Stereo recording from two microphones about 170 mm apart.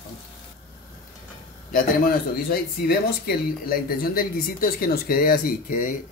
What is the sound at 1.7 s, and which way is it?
Speech, 60° left (ahead or behind).